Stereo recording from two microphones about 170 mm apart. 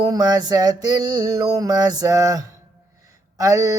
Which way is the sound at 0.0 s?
20° right (ahead or behind).